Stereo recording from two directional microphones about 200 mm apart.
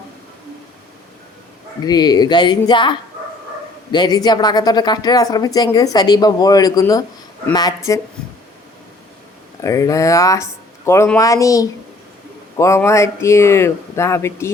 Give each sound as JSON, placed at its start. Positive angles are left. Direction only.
{"t": 1.8, "sound": "speech", "side_deg": 20}
{"t": 9.6, "sound": "speech", "side_deg": 15}